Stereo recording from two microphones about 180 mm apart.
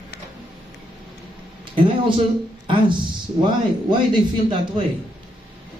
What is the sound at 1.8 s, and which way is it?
A man's voice, 25° right (ahead or behind).